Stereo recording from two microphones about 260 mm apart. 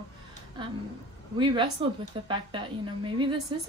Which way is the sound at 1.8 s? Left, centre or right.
Centre.